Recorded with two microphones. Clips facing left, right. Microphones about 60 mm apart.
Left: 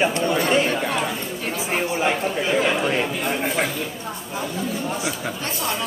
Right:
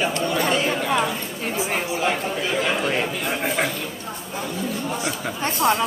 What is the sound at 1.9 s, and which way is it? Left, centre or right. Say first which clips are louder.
Speech: left 1 dB; centre.